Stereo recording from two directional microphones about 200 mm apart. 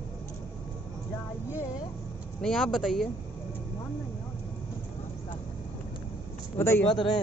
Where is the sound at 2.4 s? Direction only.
5° left (ahead or behind).